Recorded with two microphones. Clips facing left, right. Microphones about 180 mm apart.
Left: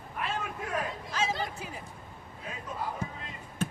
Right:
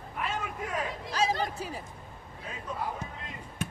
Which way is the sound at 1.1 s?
35° right (ahead or behind).